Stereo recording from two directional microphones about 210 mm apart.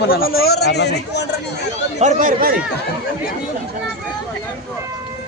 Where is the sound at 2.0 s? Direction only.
35° right (ahead or behind).